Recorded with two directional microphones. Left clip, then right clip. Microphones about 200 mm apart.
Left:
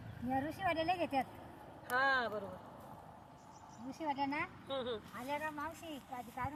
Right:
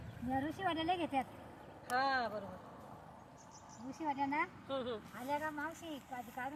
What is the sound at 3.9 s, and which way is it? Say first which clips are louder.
Speech: right 1 dB; 55° left (ahead or behind).